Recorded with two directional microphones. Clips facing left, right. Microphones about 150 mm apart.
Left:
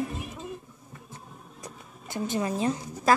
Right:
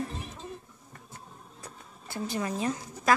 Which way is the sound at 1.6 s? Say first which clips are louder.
Left 3 dB; 20° left (ahead or behind).